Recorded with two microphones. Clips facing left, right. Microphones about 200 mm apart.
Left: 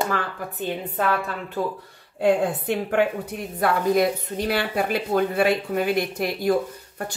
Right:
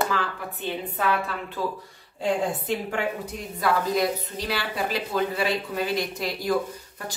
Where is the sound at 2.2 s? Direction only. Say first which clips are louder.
Left 5 dB; 60° left (ahead or behind).